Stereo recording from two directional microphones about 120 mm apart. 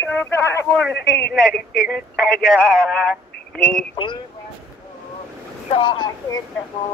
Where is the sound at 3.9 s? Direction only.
40° left (ahead or behind).